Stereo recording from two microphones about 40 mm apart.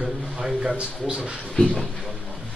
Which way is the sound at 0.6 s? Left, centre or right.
Right.